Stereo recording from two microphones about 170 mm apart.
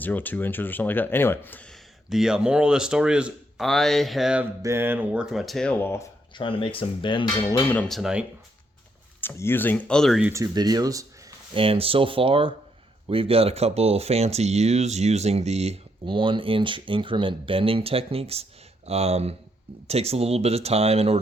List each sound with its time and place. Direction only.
0.0 s speech: 10° left (ahead or behind)
4.6 s speech: 15° right (ahead or behind); by 5.7 s centre (ahead or behind)
5.8 s speech: 15° left (ahead or behind)
6.3 s cutlery: 30° left (ahead or behind)
7.7 s speech: 5° left (ahead or behind)
9.2 s speech: 10° left (ahead or behind)
10.3 s speech: 20° right (ahead or behind)
11.5 s speech: 35° right (ahead or behind)